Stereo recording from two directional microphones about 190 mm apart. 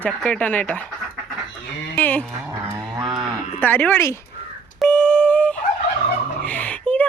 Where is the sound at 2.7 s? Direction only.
20° right (ahead or behind).